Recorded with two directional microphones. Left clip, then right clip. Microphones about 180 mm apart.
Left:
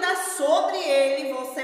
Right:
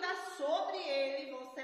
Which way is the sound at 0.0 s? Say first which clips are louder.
Left 13 dB; 10° left (ahead or behind).